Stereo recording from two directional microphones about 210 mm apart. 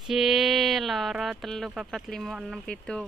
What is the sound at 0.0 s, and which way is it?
Speech, centre (ahead or behind).